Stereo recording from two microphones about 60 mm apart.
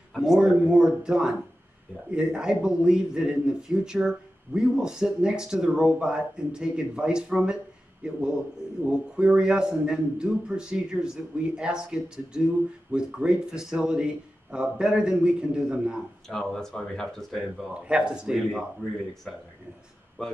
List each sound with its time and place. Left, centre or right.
0.1 s a sound: centre
0.4 s speech: centre
16.3 s speech: centre
17.8 s speech: centre
20.2 s speech: centre